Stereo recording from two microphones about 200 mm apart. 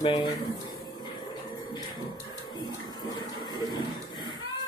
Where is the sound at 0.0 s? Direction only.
25° left (ahead or behind).